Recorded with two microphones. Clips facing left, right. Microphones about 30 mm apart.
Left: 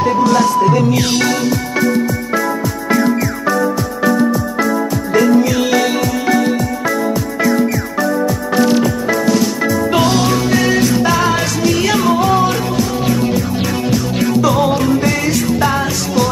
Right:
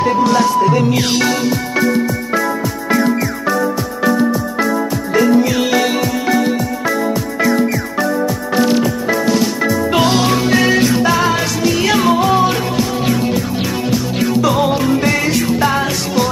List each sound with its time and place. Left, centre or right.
0.0 s music: right
11.0 s music: centre
13.8 s music: centre